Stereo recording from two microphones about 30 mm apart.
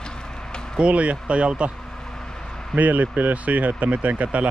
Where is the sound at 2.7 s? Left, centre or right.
Right.